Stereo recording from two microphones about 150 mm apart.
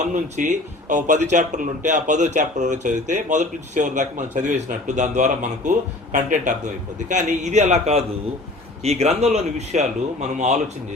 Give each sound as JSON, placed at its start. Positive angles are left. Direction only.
{"t": 0.0, "sound": "a man's voice", "side_deg": -55}